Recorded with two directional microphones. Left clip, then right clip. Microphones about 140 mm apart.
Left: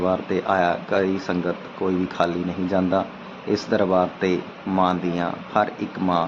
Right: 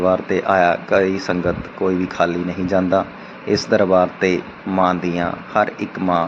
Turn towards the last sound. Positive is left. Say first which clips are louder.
# right 4 dB
turn(degrees=-20)  # may be behind; listen again after turning